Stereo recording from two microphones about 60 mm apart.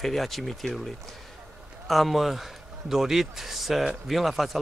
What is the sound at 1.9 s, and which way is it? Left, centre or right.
A man's voice, centre.